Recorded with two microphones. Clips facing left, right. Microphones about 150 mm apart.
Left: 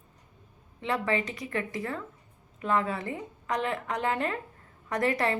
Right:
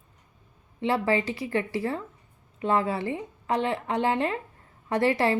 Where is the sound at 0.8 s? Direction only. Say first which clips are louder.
Right 4 dB; 30° right (ahead or behind).